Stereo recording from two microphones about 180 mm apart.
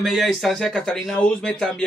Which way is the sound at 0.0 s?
Centre (ahead or behind).